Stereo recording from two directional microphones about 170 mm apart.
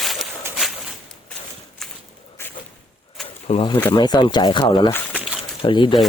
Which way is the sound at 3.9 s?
25° left (ahead or behind).